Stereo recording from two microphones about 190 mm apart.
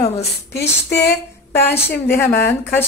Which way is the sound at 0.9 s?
60° left (ahead or behind).